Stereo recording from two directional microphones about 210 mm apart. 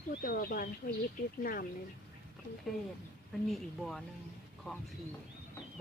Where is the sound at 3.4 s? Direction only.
Centre (ahead or behind).